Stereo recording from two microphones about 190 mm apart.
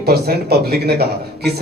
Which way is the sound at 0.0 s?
55° right (ahead or behind).